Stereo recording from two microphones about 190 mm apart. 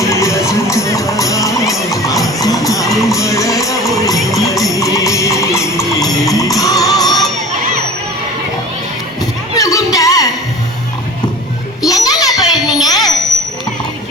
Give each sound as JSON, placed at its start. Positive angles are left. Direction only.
{"t": 0.0, "sound": "music", "side_deg": 15}
{"t": 2.9, "sound": "music", "side_deg": 0}
{"t": 3.2, "sound": "music", "side_deg": 15}
{"t": 9.6, "sound": "music", "side_deg": 15}
{"t": 11.9, "sound": "music", "side_deg": 20}
{"t": 12.6, "sound": "a sound", "side_deg": 20}